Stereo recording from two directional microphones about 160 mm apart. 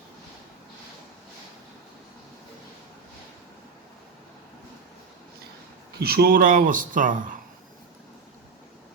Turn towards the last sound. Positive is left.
turn(degrees=-55)  # may be behind; listen again after turning